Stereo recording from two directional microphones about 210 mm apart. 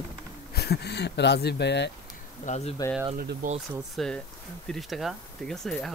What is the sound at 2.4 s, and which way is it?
Speech, 30° left (ahead or behind).